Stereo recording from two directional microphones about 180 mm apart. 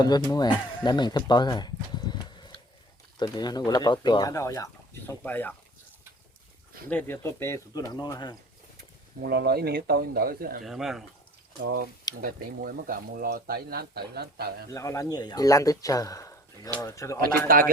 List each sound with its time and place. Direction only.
0.3 s speech: 20° left (ahead or behind)
0.9 s horse: 25° left (ahead or behind)
3.2 s speech: 25° left (ahead or behind)
6.9 s speech: 10° left (ahead or behind)
9.2 s speech: 60° right (ahead or behind)
10.6 s speech: centre (ahead or behind)
11.6 s speech: 55° right (ahead or behind)
14.7 s speech: 15° left (ahead or behind)
17.5 s speech: 50° right (ahead or behind)